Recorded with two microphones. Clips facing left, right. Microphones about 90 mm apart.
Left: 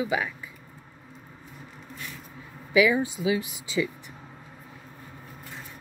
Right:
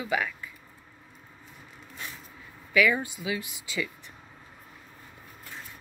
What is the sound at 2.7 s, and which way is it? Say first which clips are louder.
Speech: left 3 dB; 15° left (ahead or behind).